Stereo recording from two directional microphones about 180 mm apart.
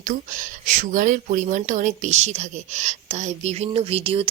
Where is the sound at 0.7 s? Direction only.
45° right (ahead or behind).